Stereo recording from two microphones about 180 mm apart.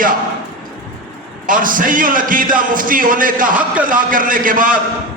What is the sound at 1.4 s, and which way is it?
A man's voice, 50° right (ahead or behind).